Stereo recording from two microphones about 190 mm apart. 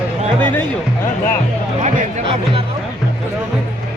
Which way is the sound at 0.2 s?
25° right (ahead or behind).